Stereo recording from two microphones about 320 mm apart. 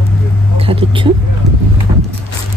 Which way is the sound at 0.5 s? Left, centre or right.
Centre.